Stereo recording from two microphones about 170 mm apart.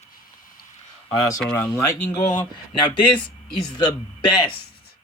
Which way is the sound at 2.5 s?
30° left (ahead or behind).